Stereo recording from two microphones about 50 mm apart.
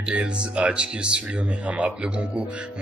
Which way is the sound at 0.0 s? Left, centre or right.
Right.